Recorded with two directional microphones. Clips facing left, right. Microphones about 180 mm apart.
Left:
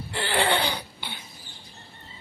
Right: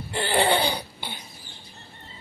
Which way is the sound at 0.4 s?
35° right (ahead or behind).